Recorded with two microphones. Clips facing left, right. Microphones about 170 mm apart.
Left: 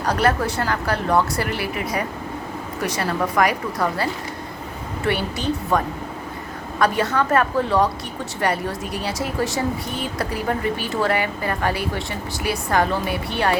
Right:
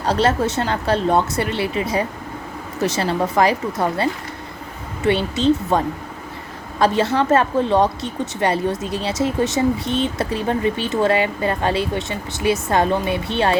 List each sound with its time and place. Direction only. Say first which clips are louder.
0.0 s a woman's voice: right 2 dB; 25° right (ahead or behind)